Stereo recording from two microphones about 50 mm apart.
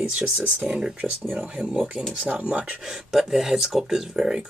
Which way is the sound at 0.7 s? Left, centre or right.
Centre.